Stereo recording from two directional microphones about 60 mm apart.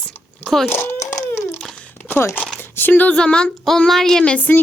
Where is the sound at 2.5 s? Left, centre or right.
Left.